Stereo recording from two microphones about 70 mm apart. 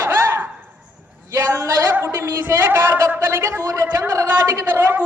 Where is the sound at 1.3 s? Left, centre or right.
Right.